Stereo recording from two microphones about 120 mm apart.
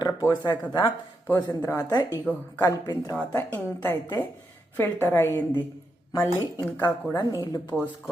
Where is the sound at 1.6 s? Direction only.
25° left (ahead or behind).